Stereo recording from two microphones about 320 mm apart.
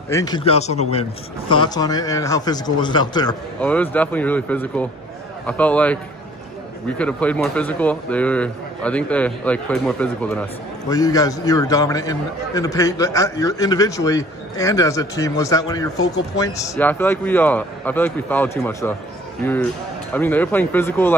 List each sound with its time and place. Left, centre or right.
0.1 s a man's voice: centre
7.0 s a man's voice: centre